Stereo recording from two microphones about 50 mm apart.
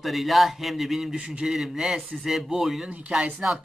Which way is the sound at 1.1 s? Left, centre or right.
Right.